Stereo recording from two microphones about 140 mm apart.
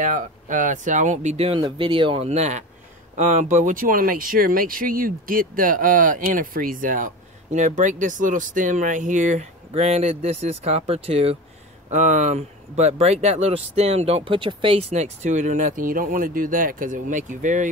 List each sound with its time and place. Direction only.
0.0 s speech: 70° right (ahead or behind); by 1.6 s 50° right (ahead or behind)
1.6 s speech: 35° right (ahead or behind); by 7.1 s 70° right (ahead or behind)
7.5 s speech: 60° right (ahead or behind)
11.9 s speech: 60° right (ahead or behind)